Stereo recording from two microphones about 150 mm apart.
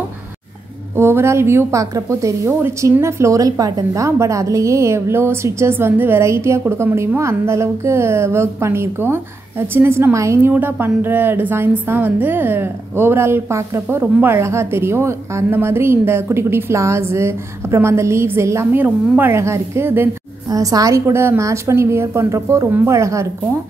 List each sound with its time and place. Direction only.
0.9 s a woman's voice: 15° right (ahead or behind)